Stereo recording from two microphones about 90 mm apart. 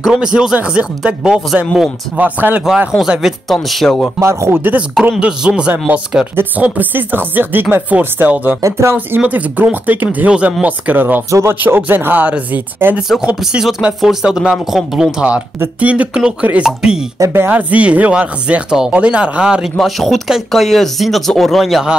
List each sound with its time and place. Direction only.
0.0 s speech: 5° right (ahead or behind)
2.1 s speech: 20° right (ahead or behind)
3.0 s speech: 5° right (ahead or behind)
4.2 s speech: 35° right (ahead or behind)
4.6 s speech: 20° right (ahead or behind)
5.9 s speech: 20° right (ahead or behind)
8.9 s speech: 20° right (ahead or behind)
11.2 s speech: 35° right (ahead or behind)
11.6 s speech: 25° right (ahead or behind)
17.2 s speech: 30° right (ahead or behind)
17.5 s speech: 15° right (ahead or behind); by 21.9 s centre (ahead or behind)